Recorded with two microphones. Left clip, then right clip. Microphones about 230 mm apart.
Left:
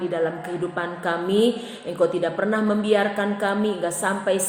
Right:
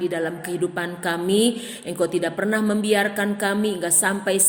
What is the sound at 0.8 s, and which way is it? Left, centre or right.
A woman's voice, right.